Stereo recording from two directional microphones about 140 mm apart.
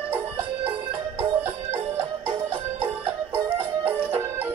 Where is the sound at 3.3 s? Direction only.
15° right (ahead or behind).